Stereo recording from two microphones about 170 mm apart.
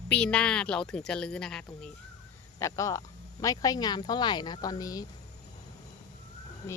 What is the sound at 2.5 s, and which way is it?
Speech, 20° left (ahead or behind).